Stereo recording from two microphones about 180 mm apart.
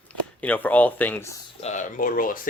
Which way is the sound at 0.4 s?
10° left (ahead or behind).